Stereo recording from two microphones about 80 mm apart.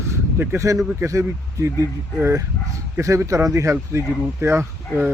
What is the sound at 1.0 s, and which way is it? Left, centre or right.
Speech, right.